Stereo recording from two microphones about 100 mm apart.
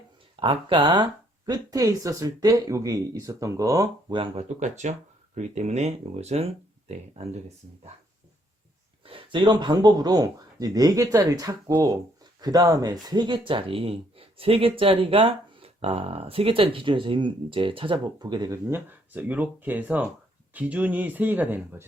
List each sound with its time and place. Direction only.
0.3 s speech: 60° right (ahead or behind)
1.5 s speech: 35° right (ahead or behind)
4.1 s speech: 60° right (ahead or behind)
5.8 s speech: 90° right
9.0 s speech: 60° right (ahead or behind)
18.5 s speech: 20° right (ahead or behind)